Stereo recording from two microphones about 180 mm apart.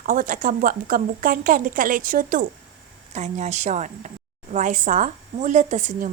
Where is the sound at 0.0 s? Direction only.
50° right (ahead or behind).